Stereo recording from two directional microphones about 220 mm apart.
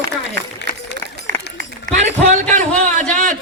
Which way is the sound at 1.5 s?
35° right (ahead or behind).